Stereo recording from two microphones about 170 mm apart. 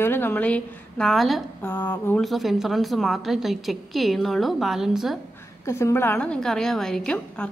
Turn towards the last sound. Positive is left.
turn(degrees=5)  # may be behind; listen again after turning